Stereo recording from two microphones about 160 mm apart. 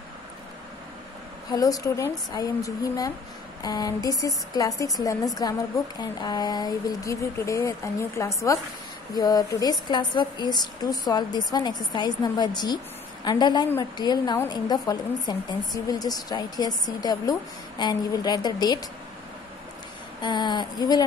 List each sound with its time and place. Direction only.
1.5 s a woman's voice: 20° left (ahead or behind)
20.2 s a woman's voice: 30° left (ahead or behind)